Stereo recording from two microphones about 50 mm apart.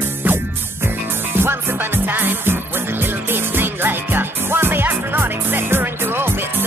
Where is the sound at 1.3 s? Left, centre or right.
Right.